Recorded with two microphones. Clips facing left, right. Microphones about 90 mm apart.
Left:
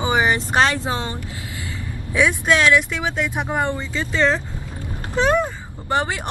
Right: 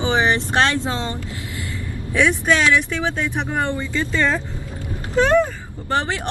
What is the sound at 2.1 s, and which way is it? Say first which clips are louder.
Speech: even; 10° left (ahead or behind).